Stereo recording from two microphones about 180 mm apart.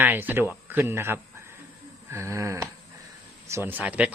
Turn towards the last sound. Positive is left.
turn(degrees=-10)  # may be behind; listen again after turning